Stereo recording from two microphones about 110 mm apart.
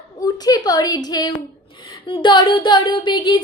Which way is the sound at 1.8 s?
50° left (ahead or behind).